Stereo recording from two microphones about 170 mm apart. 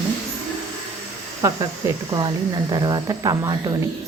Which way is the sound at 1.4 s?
20° right (ahead or behind).